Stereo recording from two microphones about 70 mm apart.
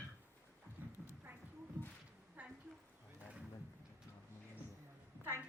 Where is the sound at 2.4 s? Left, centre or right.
Right.